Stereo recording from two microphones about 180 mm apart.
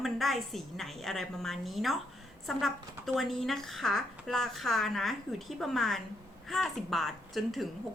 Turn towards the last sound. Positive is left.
turn(degrees=0)  # may be behind; listen again after turning